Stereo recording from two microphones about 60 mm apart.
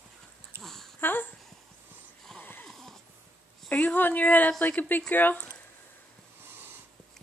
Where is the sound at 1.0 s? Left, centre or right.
Left.